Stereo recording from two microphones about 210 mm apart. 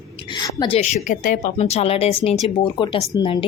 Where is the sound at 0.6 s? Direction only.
30° left (ahead or behind).